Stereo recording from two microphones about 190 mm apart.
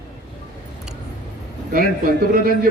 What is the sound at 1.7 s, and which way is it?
Speech, 50° right (ahead or behind).